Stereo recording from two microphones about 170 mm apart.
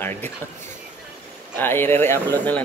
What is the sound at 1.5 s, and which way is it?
A man's voice, 10° left (ahead or behind).